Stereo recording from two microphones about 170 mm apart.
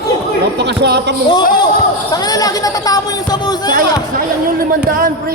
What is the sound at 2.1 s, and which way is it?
Speech, 20° left (ahead or behind).